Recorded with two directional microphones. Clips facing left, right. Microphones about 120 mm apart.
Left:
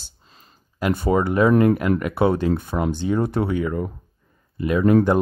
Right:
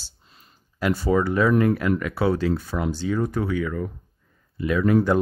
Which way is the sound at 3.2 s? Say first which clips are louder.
Left 3 dB; 65° left (ahead or behind).